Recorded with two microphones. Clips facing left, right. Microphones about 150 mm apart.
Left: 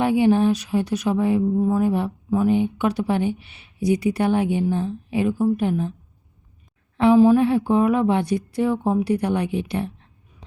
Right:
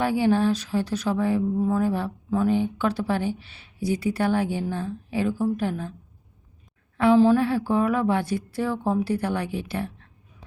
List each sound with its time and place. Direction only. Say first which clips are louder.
0.0 s speech: left 4 dB; 20° left (ahead or behind)
6.9 s a woman's voice: left 3 dB; 20° left (ahead or behind)